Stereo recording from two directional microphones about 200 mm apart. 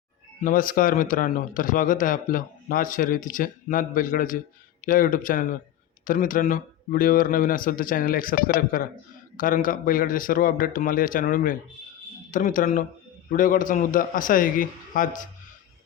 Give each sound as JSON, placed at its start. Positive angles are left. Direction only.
{"t": 0.4, "sound": "a man's voice", "side_deg": 45}